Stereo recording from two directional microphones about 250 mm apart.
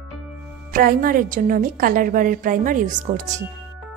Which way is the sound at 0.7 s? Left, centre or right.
Right.